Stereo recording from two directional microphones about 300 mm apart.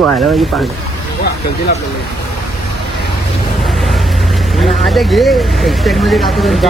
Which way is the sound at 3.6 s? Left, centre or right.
Centre.